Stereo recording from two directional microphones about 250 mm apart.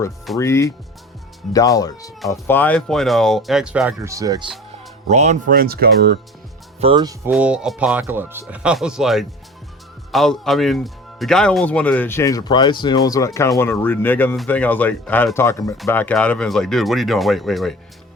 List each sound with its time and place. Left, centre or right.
0.3 s speech: centre
5.0 s speech: right
6.8 s speech: centre
7.3 s speech: centre